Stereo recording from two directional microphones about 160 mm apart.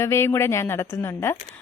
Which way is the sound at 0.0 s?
15° left (ahead or behind).